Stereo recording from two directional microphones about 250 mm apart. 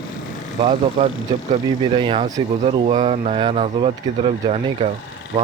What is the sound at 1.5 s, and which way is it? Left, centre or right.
Speech, right.